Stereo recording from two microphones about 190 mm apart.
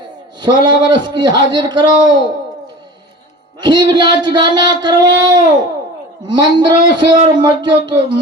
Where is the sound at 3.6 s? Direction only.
25° right (ahead or behind).